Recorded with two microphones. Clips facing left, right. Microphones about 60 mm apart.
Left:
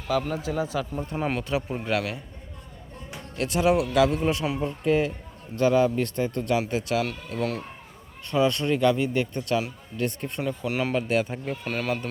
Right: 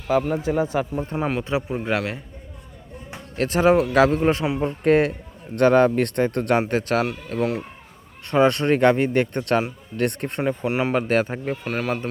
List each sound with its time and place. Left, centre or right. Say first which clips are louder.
0.1 s a man's voice: right 5 dB; right
3.1 s a man's voice: right 5 dB; right
4.6 s a man's voice: right 6 dB; right
10.4 s a man's voice: right 6 dB; right
10.7 s a man's voice: right 2 dB; right
10.9 s a man's voice: right 4 dB; right
11.6 s a man's voice: right 1 dB; centre